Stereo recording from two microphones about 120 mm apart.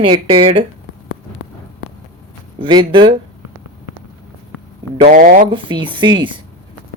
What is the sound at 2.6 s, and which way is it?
Speech, 40° right (ahead or behind).